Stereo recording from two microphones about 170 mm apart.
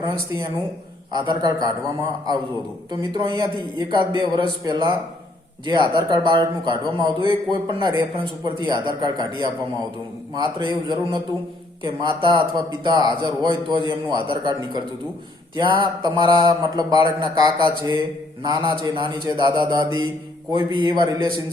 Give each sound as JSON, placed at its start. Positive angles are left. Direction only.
{"t": 0.0, "sound": "a man's voice", "side_deg": -25}
{"t": 2.9, "sound": "a man's voice", "side_deg": -25}
{"t": 21.2, "sound": "a man's voice", "side_deg": 30}